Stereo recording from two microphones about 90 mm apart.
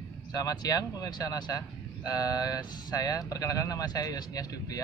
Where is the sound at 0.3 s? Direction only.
45° left (ahead or behind).